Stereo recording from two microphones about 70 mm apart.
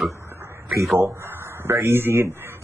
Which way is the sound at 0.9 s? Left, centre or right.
Right.